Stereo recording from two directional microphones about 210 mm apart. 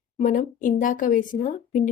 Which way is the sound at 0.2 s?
40° left (ahead or behind).